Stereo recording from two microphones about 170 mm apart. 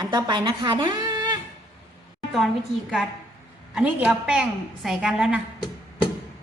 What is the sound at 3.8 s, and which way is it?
A woman's voice, 5° right (ahead or behind).